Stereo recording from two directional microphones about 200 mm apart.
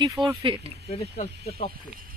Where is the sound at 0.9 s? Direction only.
30° left (ahead or behind).